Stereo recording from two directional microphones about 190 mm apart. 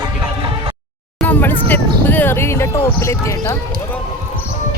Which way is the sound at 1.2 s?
10° left (ahead or behind).